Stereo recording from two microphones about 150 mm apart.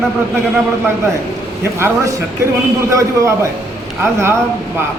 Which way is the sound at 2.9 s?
20° right (ahead or behind).